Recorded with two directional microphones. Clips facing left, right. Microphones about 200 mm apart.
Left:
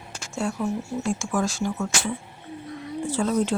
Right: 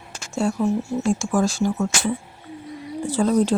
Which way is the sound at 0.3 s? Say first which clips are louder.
Right 5 dB; 30° right (ahead or behind).